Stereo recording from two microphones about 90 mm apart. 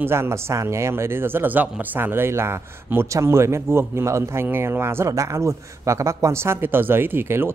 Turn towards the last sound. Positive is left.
turn(degrees=-25)  # may be behind; listen again after turning